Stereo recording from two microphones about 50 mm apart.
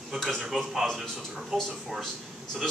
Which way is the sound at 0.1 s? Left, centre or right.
Centre.